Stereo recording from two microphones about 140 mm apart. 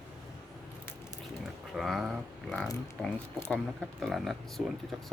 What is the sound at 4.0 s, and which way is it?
Speech, centre (ahead or behind).